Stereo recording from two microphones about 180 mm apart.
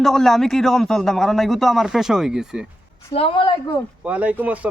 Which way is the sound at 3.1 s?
30° left (ahead or behind).